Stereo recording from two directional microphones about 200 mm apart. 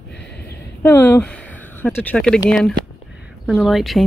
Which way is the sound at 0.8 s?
10° left (ahead or behind).